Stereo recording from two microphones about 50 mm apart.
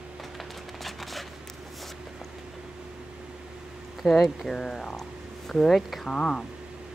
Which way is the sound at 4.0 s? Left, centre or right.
Centre.